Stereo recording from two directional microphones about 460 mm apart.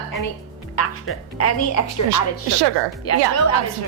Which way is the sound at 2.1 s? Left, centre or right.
Right.